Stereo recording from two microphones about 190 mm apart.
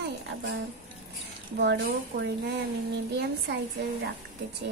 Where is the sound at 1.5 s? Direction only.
60° right (ahead or behind).